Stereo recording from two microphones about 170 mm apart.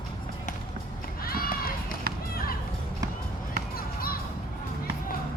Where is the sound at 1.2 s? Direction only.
60° left (ahead or behind).